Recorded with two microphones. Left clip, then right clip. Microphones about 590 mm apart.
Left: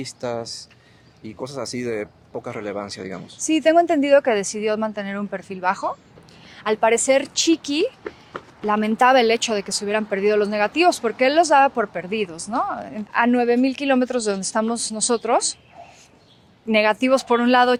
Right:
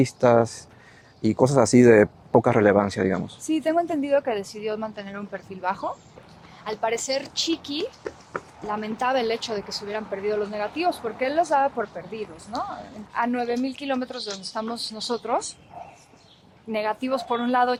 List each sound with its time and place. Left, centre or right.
0.0 s speech: right
3.4 s speech: left
6.7 s speech: left
10.1 s speech: left
13.1 s speech: left
16.6 s speech: left